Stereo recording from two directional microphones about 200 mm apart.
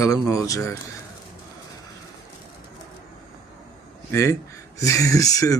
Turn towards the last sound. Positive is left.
turn(degrees=15)  # may be behind; listen again after turning